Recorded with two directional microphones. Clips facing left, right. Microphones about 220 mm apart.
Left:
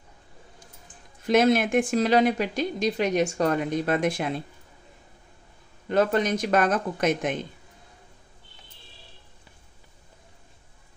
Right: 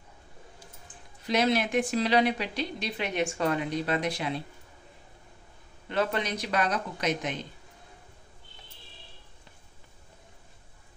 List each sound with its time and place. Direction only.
1.2 s a woman's voice: 50° left (ahead or behind)
5.9 s a woman's voice: 45° left (ahead or behind)